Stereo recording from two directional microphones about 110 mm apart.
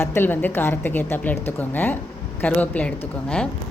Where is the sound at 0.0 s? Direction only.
20° left (ahead or behind).